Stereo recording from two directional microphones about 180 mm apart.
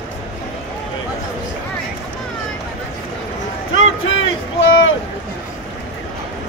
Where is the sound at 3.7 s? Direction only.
90° left.